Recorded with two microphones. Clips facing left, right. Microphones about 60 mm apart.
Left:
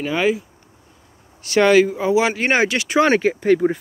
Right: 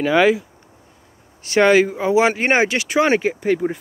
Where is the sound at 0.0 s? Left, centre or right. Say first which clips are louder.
Right 4 dB; right.